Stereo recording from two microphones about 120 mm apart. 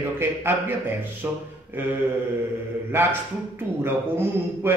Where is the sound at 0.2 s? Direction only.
20° right (ahead or behind).